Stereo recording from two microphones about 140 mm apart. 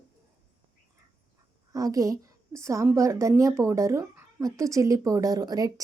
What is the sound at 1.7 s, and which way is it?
A woman's voice, 25° right (ahead or behind).